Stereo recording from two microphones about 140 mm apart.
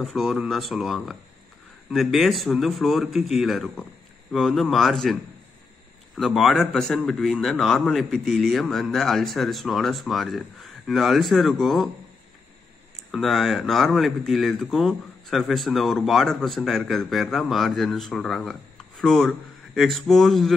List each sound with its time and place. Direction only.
0.0 s speech: centre (ahead or behind)
13.1 s speech: centre (ahead or behind)